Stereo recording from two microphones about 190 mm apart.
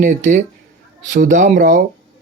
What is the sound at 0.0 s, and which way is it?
Speech, 40° right (ahead or behind).